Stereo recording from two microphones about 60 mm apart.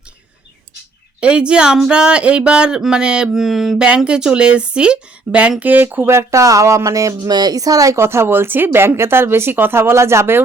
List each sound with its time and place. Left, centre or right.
1.2 s speech: centre
3.3 s a sound: centre
3.8 s speech: centre; by 6.1 s right
6.1 s speech: right
8.0 s speech: right